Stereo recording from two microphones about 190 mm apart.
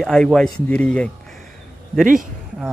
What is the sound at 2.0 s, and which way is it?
Speech, 45° right (ahead or behind).